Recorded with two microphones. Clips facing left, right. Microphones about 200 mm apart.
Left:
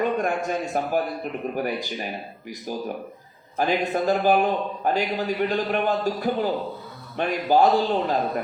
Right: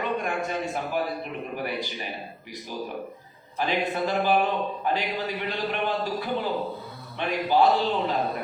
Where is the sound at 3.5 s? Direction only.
45° left (ahead or behind).